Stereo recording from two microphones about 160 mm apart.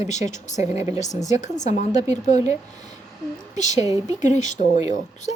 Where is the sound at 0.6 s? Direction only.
20° right (ahead or behind).